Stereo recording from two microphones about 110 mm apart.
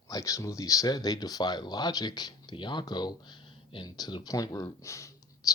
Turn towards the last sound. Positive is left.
turn(degrees=30)  # may be behind; listen again after turning